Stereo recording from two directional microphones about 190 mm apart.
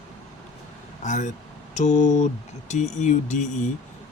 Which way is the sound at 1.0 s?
40° left (ahead or behind).